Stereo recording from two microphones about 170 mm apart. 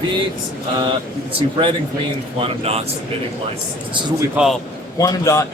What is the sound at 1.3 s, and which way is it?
Speech, 30° right (ahead or behind).